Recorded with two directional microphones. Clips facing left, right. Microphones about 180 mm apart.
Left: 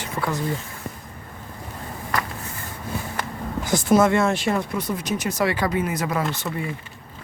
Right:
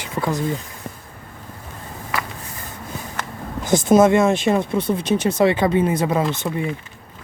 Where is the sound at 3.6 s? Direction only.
20° right (ahead or behind).